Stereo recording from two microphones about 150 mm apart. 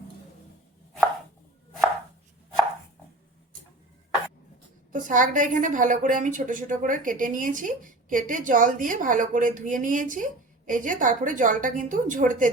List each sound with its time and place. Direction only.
4.9 s a woman's voice: 60° right (ahead or behind)